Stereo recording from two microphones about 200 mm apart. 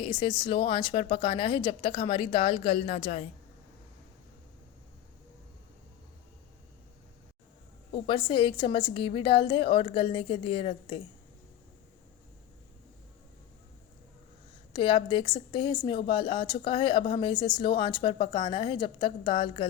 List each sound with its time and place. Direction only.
0.0 s speech: 25° left (ahead or behind)
7.9 s speech: 25° left (ahead or behind)
14.7 s speech: 25° left (ahead or behind)